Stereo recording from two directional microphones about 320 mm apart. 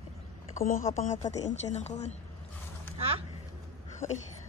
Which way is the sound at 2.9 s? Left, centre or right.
Centre.